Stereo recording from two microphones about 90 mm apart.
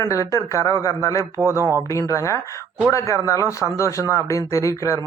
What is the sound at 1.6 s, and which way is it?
Speech, 35° right (ahead or behind).